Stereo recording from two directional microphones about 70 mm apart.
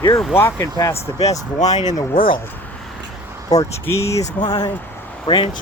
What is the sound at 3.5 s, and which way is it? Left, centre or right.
Speech, left.